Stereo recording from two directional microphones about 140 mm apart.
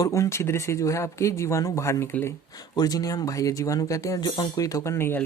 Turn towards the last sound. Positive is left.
turn(degrees=15)  # may be behind; listen again after turning